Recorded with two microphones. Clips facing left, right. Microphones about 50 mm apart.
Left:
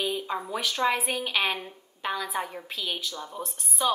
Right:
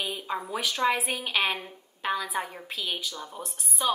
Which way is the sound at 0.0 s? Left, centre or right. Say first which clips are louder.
Left 2 dB; centre.